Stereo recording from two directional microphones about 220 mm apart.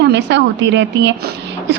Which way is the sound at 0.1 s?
55° right (ahead or behind).